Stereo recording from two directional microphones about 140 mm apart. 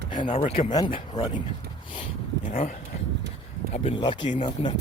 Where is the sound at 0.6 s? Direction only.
30° left (ahead or behind).